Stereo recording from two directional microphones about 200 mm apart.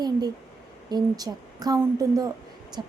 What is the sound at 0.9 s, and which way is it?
A woman's voice, 20° right (ahead or behind).